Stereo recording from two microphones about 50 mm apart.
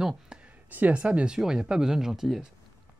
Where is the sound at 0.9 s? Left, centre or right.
Right.